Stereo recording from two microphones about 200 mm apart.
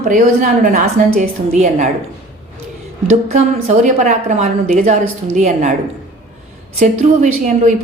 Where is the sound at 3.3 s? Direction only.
35° right (ahead or behind).